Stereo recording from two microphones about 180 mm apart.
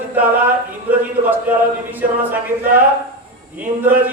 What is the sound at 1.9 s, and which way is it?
Speech, 10° right (ahead or behind).